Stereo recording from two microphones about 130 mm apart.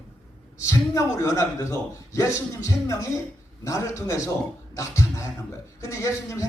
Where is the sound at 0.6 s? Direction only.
25° left (ahead or behind).